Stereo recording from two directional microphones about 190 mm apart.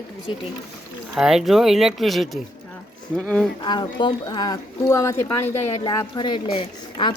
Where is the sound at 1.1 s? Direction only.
5° right (ahead or behind).